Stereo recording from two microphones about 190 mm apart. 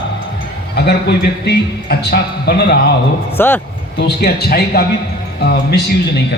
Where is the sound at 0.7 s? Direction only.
60° left (ahead or behind).